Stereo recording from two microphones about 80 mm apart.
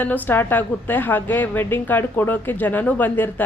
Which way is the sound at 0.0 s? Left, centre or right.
Left.